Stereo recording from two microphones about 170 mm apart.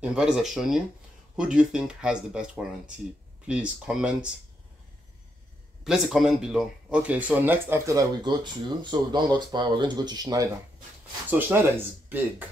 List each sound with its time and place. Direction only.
0.0 s speech: 5° right (ahead or behind)
5.9 s speech: centre (ahead or behind); by 10.5 s 20° right (ahead or behind)
11.2 s speech: 10° right (ahead or behind)